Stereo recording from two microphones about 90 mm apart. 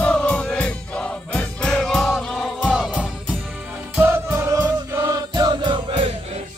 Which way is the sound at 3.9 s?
25° right (ahead or behind).